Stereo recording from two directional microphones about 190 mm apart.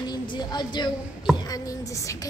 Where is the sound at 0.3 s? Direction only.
20° left (ahead or behind).